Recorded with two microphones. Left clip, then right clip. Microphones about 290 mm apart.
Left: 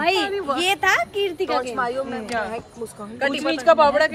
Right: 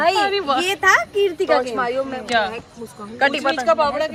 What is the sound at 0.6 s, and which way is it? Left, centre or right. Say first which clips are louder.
A woman's voice: right 2 dB; centre.